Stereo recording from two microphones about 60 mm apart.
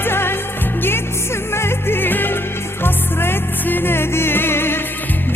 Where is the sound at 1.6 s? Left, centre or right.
Left.